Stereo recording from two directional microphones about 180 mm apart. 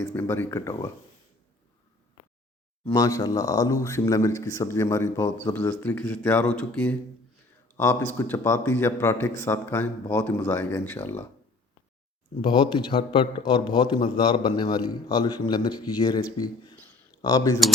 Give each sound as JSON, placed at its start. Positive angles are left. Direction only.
{"t": 0.0, "sound": "speech", "side_deg": 10}
{"t": 2.9, "sound": "speech", "side_deg": 20}
{"t": 12.4, "sound": "a man's voice", "side_deg": 25}